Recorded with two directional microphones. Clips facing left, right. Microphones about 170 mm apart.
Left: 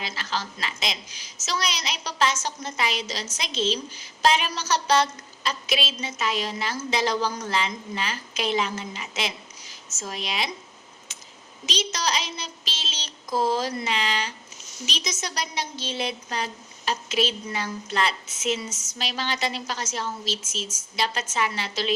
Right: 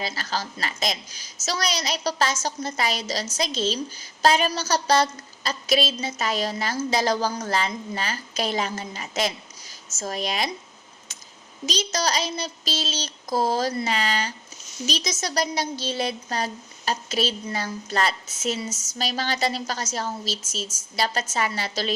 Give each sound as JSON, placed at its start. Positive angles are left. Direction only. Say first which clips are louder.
{"t": 0.0, "sound": "a woman's voice", "louder": "right 2 dB", "side_deg": -40}
{"t": 11.6, "sound": "a woman's voice", "louder": "right 3 dB", "side_deg": -40}